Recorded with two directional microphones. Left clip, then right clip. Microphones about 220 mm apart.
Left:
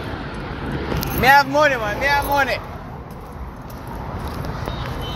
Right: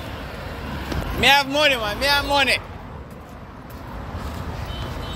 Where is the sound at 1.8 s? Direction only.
25° right (ahead or behind).